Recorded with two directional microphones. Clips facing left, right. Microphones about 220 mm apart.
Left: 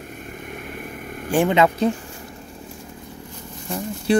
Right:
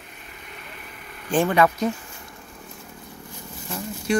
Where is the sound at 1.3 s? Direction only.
20° left (ahead or behind).